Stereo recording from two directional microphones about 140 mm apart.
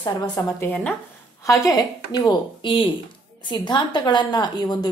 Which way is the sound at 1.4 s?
25° left (ahead or behind).